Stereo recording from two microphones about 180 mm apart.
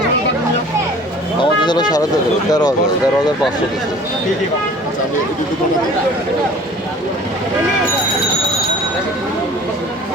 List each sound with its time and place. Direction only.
1.6 s speech: 25° left (ahead or behind)